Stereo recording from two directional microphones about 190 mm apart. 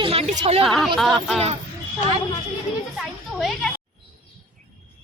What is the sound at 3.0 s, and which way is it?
Speech, centre (ahead or behind).